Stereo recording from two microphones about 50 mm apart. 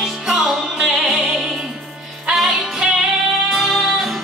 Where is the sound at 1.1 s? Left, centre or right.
Centre.